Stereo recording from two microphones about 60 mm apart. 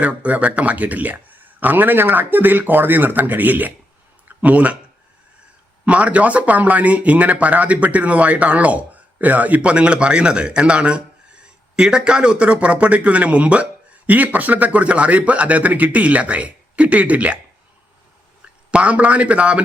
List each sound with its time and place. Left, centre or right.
0.0 s speech: right
5.8 s speech: right
18.7 s speech: right